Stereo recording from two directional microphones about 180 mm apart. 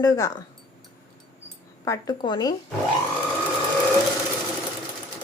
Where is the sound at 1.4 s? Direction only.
20° left (ahead or behind).